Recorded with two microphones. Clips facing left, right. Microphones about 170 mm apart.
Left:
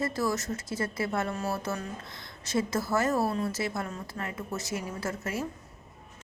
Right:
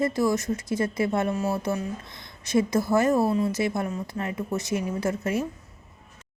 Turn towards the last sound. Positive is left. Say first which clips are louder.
# right 7 dB
turn(degrees=-20)  # may be behind; listen again after turning